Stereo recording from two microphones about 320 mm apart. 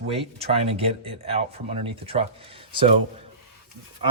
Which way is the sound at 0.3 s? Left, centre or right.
Centre.